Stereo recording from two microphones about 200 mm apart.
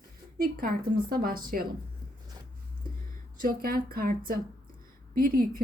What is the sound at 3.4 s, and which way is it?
Speech, 45° right (ahead or behind).